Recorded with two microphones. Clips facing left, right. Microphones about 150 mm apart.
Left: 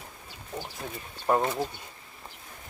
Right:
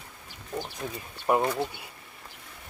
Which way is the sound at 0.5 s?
20° right (ahead or behind).